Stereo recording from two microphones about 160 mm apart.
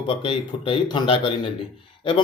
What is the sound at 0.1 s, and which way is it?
Speech, 35° left (ahead or behind).